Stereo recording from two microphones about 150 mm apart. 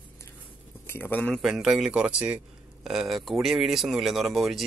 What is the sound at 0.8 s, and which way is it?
Speech, 15° left (ahead or behind).